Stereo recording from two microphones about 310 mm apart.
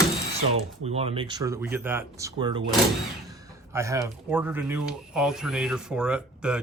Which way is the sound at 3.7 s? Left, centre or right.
Centre.